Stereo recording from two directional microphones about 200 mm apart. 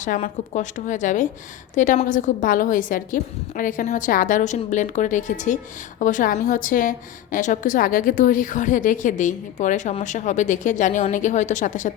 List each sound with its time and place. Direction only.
0.0 s a woman's voice: 40° left (ahead or behind)